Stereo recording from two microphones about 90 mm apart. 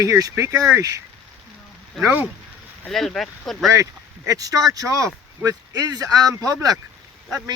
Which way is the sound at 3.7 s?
35° right (ahead or behind).